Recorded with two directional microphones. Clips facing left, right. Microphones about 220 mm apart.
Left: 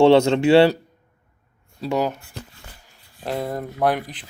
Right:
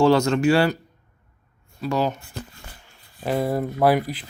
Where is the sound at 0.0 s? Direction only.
25° left (ahead or behind).